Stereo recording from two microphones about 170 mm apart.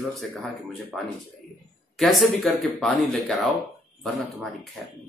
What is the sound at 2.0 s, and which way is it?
Speech, centre (ahead or behind).